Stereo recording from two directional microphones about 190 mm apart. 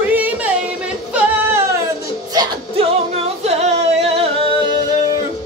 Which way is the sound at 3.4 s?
35° right (ahead or behind).